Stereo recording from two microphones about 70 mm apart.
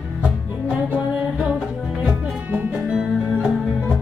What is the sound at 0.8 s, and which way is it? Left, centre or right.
Music, centre.